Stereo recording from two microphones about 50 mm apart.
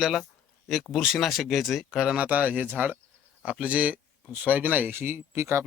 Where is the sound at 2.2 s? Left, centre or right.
Right.